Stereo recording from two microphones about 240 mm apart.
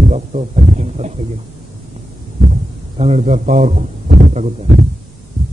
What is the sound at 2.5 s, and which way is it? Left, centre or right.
A man's voice, right.